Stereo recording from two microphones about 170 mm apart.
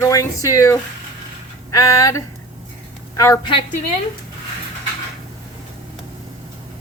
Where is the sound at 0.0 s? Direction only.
20° left (ahead or behind).